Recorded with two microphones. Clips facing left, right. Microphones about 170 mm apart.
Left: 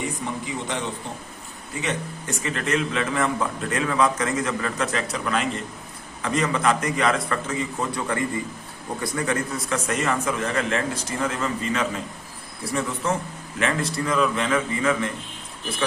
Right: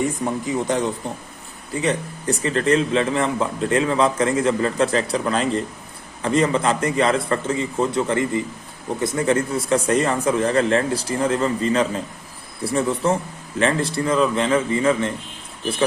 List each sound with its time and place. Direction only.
0.4 s a man's voice: 40° right (ahead or behind)